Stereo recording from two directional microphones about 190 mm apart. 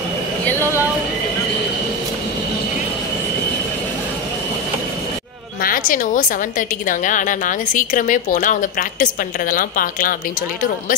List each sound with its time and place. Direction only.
5.6 s a woman's voice: 45° left (ahead or behind)